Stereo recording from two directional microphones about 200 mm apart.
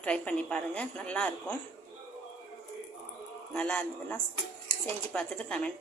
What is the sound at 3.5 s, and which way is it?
A man's voice, 5° left (ahead or behind).